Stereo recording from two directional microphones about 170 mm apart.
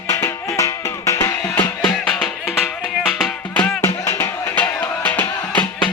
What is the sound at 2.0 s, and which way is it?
Music, 5° left (ahead or behind).